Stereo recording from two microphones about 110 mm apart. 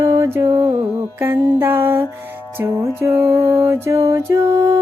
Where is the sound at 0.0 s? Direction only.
25° right (ahead or behind).